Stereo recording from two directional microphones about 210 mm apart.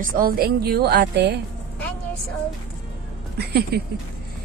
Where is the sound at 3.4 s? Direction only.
50° right (ahead or behind).